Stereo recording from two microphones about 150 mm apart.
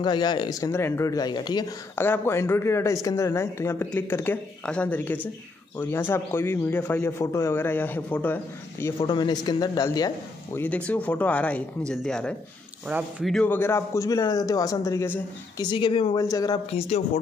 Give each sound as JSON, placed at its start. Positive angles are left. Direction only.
{"t": 0.0, "sound": "a man's voice", "side_deg": 30}
{"t": 2.0, "sound": "speech", "side_deg": 15}
{"t": 9.0, "sound": "a man's voice", "side_deg": 30}
{"t": 10.6, "sound": "a man's voice", "side_deg": 10}
{"t": 15.6, "sound": "speech", "side_deg": 30}
{"t": 16.2, "sound": "a man's voice", "side_deg": 25}
{"t": 16.7, "sound": "speech", "side_deg": 50}